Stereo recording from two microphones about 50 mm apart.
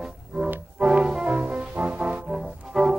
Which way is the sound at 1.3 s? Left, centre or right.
Right.